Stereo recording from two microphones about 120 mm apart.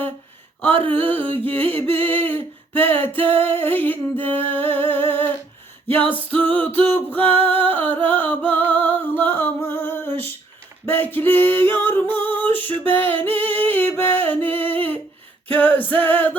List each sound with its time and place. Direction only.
0.9 s humming: 15° left (ahead or behind)
2.2 s a sound: 15° left (ahead or behind)
3.2 s female singing: 50° right (ahead or behind)
3.4 s humming: 15° left (ahead or behind)
6.1 s music: 15° left (ahead or behind)
10.8 s singing: 15° left (ahead or behind)
15.4 s humming: 15° left (ahead or behind)